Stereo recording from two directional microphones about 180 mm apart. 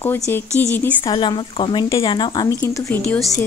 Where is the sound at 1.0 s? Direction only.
25° left (ahead or behind).